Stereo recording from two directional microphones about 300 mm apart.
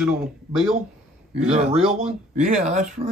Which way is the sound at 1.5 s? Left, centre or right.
Right.